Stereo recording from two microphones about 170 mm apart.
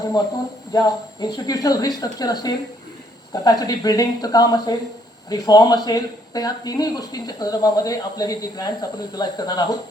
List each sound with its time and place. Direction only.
0.7 s speech: 20° left (ahead or behind)